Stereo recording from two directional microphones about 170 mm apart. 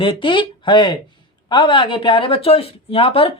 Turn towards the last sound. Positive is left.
turn(degrees=35)  # may be behind; listen again after turning